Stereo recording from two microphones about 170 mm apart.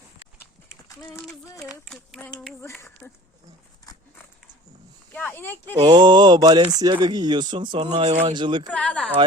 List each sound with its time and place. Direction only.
1.6 s a sound: 5° right (ahead or behind)
1.9 s a sound: 5° left (ahead or behind)
3.0 s speech: 5° left (ahead or behind)
5.1 s speech: 10° left (ahead or behind)
5.9 s speech: 25° right (ahead or behind)
8.7 s speech: 5° left (ahead or behind)